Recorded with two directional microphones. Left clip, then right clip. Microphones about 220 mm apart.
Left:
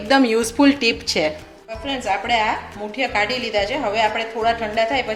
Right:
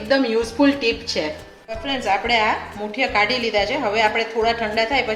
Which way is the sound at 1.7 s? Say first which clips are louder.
Right 1 dB; centre (ahead or behind).